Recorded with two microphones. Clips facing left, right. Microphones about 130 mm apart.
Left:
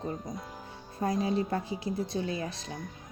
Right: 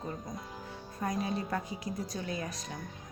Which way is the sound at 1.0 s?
30° left (ahead or behind).